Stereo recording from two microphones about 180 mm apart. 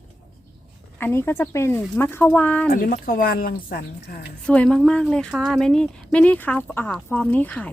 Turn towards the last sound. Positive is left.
turn(degrees=10)  # may be behind; listen again after turning